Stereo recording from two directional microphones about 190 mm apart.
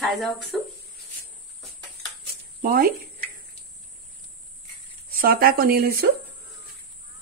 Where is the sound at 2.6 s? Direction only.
55° right (ahead or behind).